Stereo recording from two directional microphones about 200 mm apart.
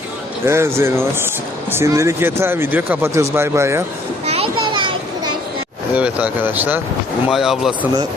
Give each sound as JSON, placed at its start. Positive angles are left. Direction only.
{"t": 0.4, "sound": "speech", "side_deg": -15}
{"t": 4.3, "sound": "children playing", "side_deg": -25}
{"t": 5.9, "sound": "speech", "side_deg": -5}